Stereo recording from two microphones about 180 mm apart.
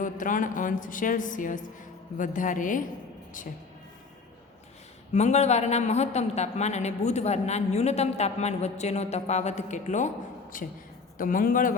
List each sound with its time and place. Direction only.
0.0 s a woman's voice: 45° left (ahead or behind)
5.1 s a woman's voice: 40° left (ahead or behind)